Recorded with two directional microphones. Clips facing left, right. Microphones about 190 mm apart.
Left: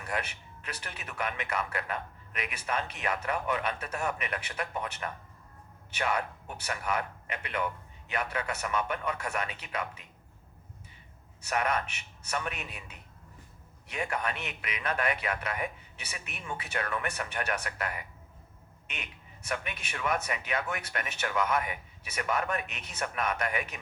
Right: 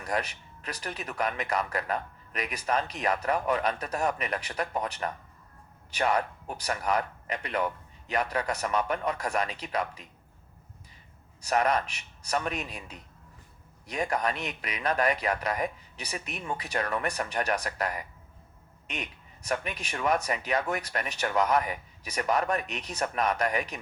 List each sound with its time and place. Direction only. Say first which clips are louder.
0.0 s a sound: right 4 dB; 40° right (ahead or behind)
0.6 s speech: right 6 dB; 40° right (ahead or behind)
11.4 s speech: right 4 dB; 35° right (ahead or behind)